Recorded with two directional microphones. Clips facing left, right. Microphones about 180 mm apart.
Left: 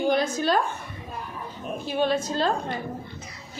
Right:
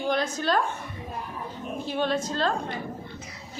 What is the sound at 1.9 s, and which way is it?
Speech, 5° left (ahead or behind).